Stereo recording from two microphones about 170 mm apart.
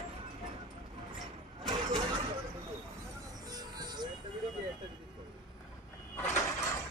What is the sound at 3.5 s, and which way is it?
Music, 25° right (ahead or behind).